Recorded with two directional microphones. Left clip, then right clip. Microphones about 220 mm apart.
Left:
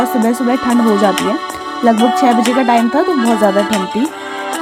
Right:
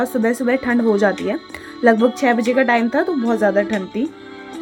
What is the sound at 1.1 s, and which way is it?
Music, 35° left (ahead or behind).